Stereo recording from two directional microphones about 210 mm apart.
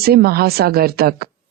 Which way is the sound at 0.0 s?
45° right (ahead or behind).